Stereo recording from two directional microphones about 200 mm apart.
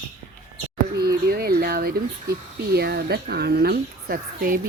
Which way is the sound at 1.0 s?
50° right (ahead or behind).